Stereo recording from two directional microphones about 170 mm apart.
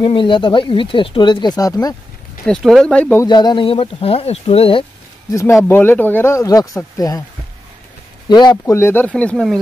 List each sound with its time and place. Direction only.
0.0 s speech: 30° left (ahead or behind)
2.4 s speech: centre (ahead or behind)
3.3 s speech: 25° left (ahead or behind)
5.6 s speech: 15° left (ahead or behind)
8.3 s speech: 25° left (ahead or behind); by 9.6 s 5° left (ahead or behind)